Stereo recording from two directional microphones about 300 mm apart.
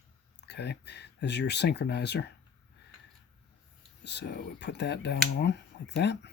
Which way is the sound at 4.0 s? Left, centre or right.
Left.